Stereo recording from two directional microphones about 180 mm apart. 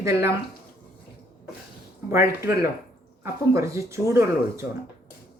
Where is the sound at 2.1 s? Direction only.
15° right (ahead or behind).